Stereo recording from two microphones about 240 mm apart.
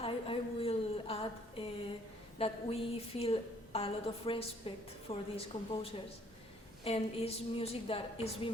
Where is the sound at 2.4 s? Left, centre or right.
Left.